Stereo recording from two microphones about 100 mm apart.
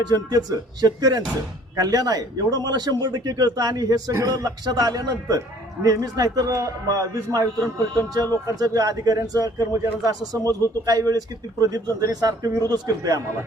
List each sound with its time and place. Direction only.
0.0 s a man's voice: 40° right (ahead or behind)